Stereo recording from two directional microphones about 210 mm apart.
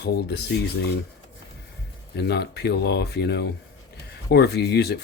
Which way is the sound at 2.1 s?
50° left (ahead or behind).